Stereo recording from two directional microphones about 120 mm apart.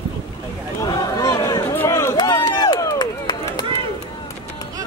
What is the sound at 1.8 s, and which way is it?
Run, 20° left (ahead or behind).